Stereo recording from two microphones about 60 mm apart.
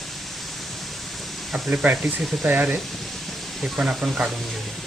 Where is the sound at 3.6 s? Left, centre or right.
Centre.